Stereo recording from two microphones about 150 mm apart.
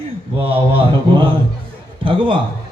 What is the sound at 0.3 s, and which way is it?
A man's voice, 40° right (ahead or behind).